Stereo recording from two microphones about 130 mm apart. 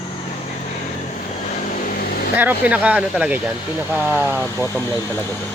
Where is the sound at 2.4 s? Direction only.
10° right (ahead or behind).